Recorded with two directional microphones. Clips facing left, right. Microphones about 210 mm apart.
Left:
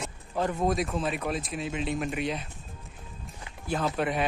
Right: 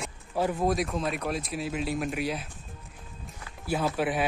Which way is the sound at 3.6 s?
5° right (ahead or behind).